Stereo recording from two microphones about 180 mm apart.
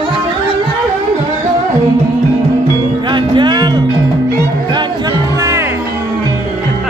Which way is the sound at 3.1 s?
25° right (ahead or behind).